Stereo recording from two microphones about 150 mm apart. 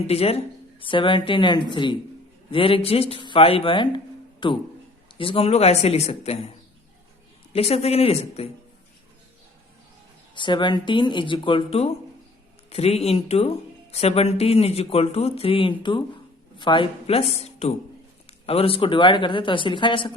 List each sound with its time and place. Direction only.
0.1 s a man's voice: 40° left (ahead or behind)
7.5 s a man's voice: 45° left (ahead or behind)
10.3 s a man's voice: 30° left (ahead or behind)